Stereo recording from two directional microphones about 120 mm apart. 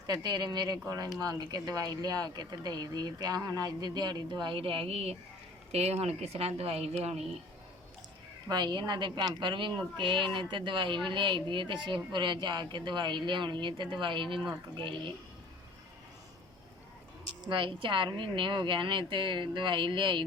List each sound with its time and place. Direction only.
0.1 s speech: 35° right (ahead or behind); by 7.2 s 60° right (ahead or behind)
8.4 s a woman's voice: 35° right (ahead or behind)
17.4 s a woman's voice: 45° right (ahead or behind)